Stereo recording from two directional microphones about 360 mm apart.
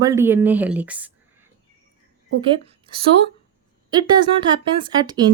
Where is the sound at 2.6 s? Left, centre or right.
Centre.